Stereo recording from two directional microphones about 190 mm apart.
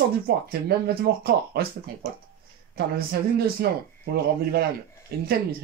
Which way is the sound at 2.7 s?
55° right (ahead or behind).